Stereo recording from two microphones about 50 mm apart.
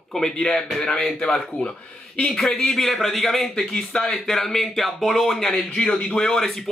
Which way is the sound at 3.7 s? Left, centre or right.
Centre.